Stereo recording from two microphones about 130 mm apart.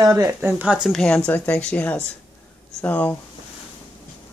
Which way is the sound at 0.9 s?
5° left (ahead or behind).